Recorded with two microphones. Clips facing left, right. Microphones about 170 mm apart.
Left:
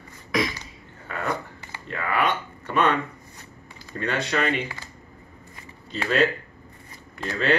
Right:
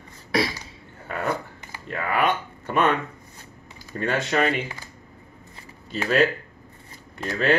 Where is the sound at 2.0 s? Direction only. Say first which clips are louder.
Right 1 dB; 45° right (ahead or behind).